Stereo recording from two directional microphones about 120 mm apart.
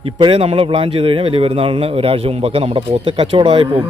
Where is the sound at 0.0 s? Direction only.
50° right (ahead or behind).